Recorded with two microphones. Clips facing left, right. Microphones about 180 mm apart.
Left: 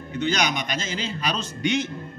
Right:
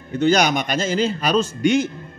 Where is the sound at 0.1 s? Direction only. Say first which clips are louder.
Right 8 dB; 45° right (ahead or behind).